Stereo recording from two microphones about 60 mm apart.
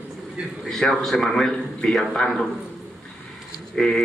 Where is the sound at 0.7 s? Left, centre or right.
Centre.